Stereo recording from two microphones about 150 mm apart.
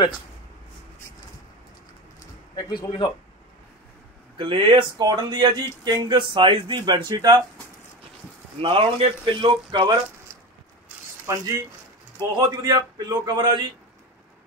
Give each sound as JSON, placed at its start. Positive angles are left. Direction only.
{"t": 2.5, "sound": "speech", "side_deg": 30}
{"t": 4.4, "sound": "speech", "side_deg": -35}
{"t": 8.5, "sound": "speech", "side_deg": -40}